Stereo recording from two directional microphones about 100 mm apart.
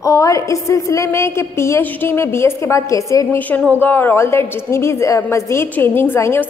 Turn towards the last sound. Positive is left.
turn(degrees=25)  # may be behind; listen again after turning